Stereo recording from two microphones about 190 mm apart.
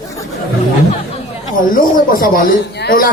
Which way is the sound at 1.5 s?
45° left (ahead or behind).